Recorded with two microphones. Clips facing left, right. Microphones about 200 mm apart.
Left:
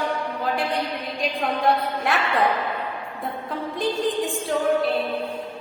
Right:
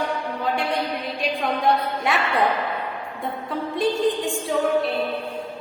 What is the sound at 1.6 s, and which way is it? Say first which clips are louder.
Speech: even; centre (ahead or behind).